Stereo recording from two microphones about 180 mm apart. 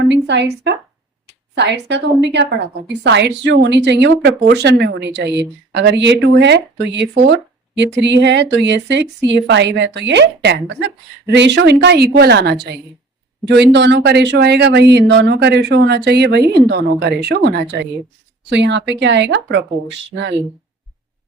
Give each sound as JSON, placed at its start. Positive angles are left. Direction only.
{"t": 0.1, "sound": "a sound", "side_deg": -75}
{"t": 1.5, "sound": "a woman's voice", "side_deg": -70}
{"t": 18.4, "sound": "a woman's voice", "side_deg": -80}